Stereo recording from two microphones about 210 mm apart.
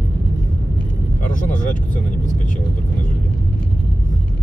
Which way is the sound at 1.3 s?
35° left (ahead or behind).